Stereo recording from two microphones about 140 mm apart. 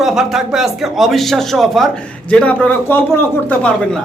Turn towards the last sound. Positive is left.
turn(degrees=5)  # may be behind; listen again after turning